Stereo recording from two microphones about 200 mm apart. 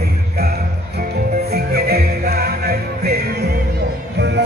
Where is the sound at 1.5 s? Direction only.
50° right (ahead or behind).